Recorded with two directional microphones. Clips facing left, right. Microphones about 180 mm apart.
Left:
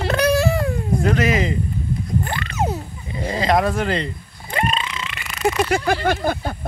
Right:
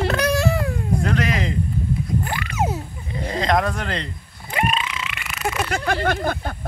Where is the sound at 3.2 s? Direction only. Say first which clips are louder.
Left 2 dB; 5° left (ahead or behind).